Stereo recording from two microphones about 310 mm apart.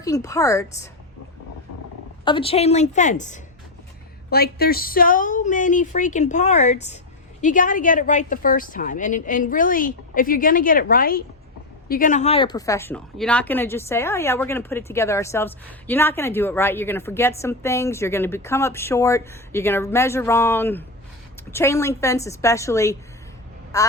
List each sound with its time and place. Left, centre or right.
0.0 s speech: centre
2.2 s a woman's voice: centre